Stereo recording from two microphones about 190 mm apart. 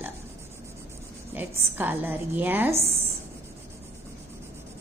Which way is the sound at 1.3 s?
10° right (ahead or behind).